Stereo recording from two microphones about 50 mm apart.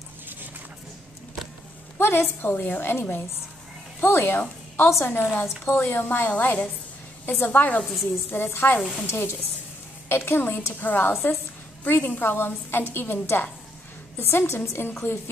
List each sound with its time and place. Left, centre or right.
2.0 s a woman's voice: left
7.8 s speech: centre
8.5 s a woman's voice: left